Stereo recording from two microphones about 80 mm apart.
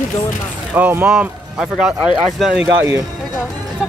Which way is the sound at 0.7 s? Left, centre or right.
Right.